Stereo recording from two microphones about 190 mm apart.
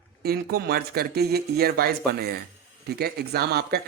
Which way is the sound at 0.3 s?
55° right (ahead or behind).